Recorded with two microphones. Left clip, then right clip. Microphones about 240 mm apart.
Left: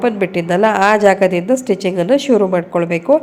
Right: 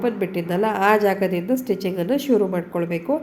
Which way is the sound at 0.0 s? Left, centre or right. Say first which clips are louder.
Left 7 dB; left.